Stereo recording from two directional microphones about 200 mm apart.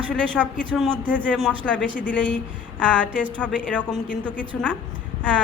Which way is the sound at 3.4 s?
5° left (ahead or behind).